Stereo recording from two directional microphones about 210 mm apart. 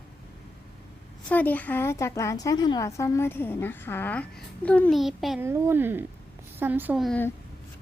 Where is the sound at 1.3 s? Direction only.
10° left (ahead or behind).